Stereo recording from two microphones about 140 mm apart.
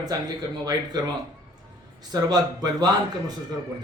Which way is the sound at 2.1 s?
30° right (ahead or behind).